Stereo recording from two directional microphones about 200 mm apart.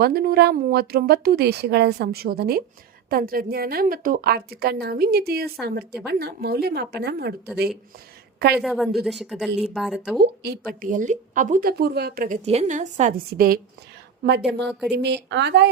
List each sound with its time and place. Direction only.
0.0 s a woman's voice: 50° right (ahead or behind)
8.5 s speech: centre (ahead or behind)
10.2 s speech: 50° right (ahead or behind)
12.5 s a woman's voice: 35° right (ahead or behind)
14.9 s a woman's voice: 60° right (ahead or behind)